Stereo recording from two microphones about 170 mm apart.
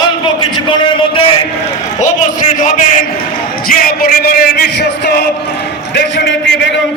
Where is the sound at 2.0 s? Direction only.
50° left (ahead or behind).